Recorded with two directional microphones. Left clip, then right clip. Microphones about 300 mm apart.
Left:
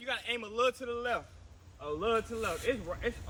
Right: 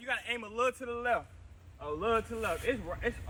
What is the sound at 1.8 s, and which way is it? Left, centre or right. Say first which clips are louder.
A man's voice: even; centre.